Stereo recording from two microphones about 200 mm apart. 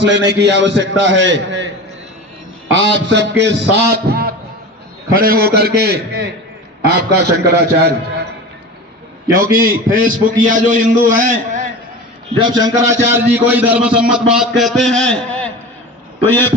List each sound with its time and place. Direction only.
0.1 s a man's voice: 60° right (ahead or behind)
2.7 s a man's voice: 65° right (ahead or behind)
9.4 s a man's voice: 45° right (ahead or behind)
12.4 s a man's voice: 20° right (ahead or behind); by 16.6 s 10° left (ahead or behind)